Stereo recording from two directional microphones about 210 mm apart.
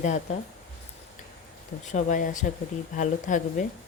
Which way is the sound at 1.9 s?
35° left (ahead or behind).